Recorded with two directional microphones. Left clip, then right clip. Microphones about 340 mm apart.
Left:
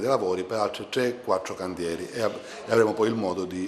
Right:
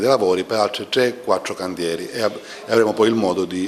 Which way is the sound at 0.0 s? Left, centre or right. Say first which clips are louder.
Right 8 dB; right.